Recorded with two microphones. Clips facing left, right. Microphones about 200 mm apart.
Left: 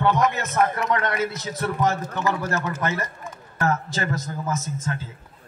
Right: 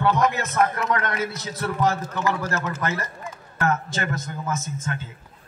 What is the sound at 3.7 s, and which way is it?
Speech, 35° left (ahead or behind).